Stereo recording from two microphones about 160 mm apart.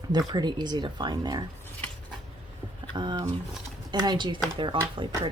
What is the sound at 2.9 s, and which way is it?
A woman's voice, 25° right (ahead or behind).